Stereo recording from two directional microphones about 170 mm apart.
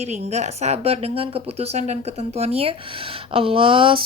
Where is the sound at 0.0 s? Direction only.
40° right (ahead or behind).